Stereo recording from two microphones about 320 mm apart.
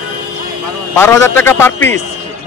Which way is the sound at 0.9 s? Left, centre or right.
Centre.